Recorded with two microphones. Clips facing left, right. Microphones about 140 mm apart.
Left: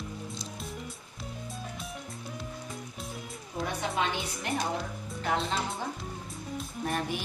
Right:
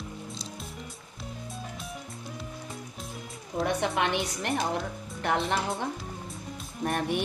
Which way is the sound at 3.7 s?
70° right (ahead or behind).